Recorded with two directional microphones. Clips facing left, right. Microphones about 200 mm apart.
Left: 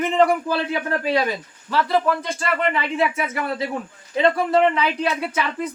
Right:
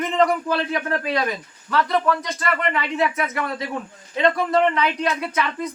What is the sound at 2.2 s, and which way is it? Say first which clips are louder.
Speech: left 2 dB; 30° left (ahead or behind).